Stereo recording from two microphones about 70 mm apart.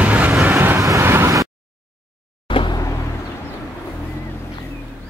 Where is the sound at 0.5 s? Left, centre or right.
Right.